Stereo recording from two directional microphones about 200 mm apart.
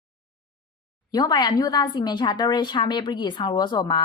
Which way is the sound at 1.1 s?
20° left (ahead or behind).